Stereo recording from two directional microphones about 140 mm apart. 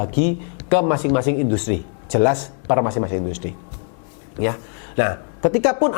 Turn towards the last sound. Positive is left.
turn(degrees=15)  # may be behind; listen again after turning